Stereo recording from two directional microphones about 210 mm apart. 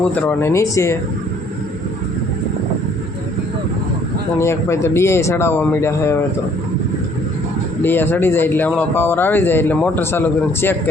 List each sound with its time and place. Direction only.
0.1 s a man's voice: 10° left (ahead or behind)
4.4 s a man's voice: 10° left (ahead or behind)
7.8 s a man's voice: 10° left (ahead or behind)